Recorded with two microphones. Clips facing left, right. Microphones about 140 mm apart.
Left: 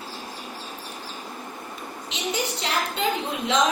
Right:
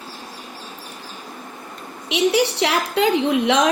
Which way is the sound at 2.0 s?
90° right.